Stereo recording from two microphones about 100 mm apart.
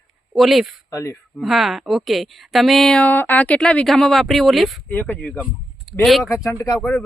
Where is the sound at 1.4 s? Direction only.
Centre (ahead or behind).